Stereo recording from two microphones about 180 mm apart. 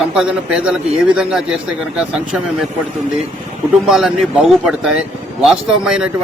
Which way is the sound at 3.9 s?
Centre (ahead or behind).